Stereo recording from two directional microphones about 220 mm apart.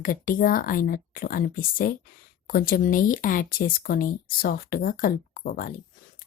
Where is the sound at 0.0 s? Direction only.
40° left (ahead or behind).